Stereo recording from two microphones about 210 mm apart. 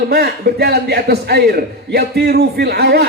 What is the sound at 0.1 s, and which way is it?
A man's voice, 50° right (ahead or behind).